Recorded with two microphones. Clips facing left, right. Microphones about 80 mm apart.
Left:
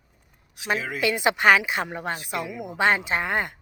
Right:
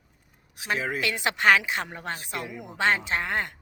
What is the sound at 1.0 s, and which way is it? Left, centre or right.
A woman's voice, centre.